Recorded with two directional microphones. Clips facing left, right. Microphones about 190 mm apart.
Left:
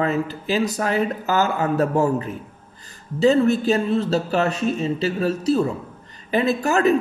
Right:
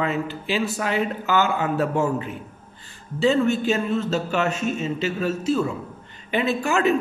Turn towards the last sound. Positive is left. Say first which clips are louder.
# left 3 dB
turn(degrees=40)  # may be behind; listen again after turning